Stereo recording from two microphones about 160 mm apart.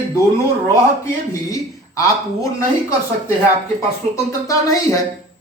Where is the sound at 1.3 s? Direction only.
20° left (ahead or behind).